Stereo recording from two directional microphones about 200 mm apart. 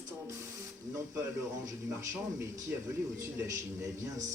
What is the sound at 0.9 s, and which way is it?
A man's voice, 15° right (ahead or behind).